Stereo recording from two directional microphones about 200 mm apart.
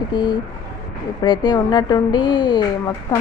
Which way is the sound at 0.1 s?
20° left (ahead or behind).